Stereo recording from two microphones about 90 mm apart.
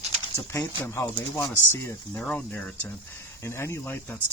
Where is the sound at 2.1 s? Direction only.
15° left (ahead or behind).